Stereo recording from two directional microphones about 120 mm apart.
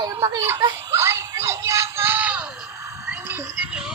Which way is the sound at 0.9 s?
20° right (ahead or behind).